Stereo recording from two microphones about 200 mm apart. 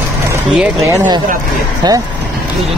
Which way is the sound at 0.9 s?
15° right (ahead or behind).